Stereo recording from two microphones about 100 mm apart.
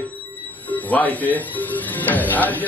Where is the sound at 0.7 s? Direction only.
15° left (ahead or behind).